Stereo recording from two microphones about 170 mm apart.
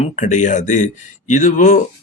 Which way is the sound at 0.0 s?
45° left (ahead or behind).